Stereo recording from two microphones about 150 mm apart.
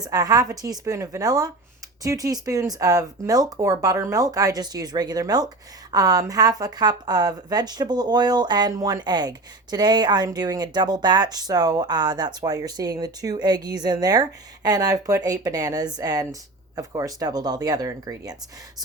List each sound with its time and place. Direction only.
0.0 s speech: 25° right (ahead or behind)